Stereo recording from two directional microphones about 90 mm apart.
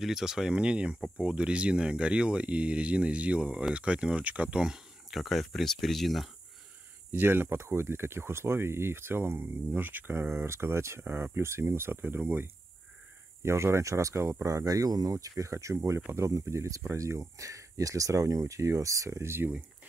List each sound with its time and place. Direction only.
0.0 s speech: 5° right (ahead or behind)
7.1 s speech: 25° right (ahead or behind)